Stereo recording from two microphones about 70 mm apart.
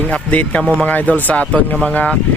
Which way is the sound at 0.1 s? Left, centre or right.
Centre.